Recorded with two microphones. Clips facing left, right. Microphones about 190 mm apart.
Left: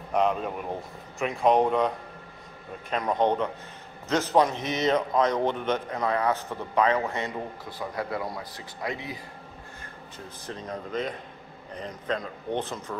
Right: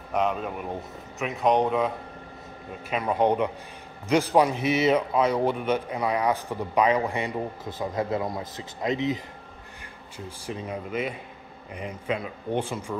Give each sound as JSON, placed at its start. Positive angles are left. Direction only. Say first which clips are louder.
{"t": 0.1, "sound": "speech", "louder": "left 1 dB", "side_deg": 0}
{"t": 2.9, "sound": "a man's voice", "louder": "right 1 dB", "side_deg": -10}
{"t": 10.1, "sound": "a man's voice", "louder": "right 4 dB", "side_deg": -10}